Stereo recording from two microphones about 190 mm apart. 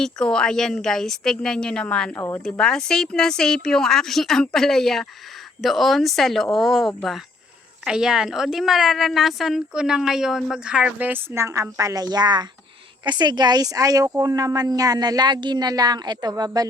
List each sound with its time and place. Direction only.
0.0 s a woman's voice: 5° left (ahead or behind); by 16.6 s 20° right (ahead or behind)